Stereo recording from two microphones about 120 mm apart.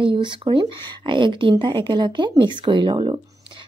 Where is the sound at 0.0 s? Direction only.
45° right (ahead or behind).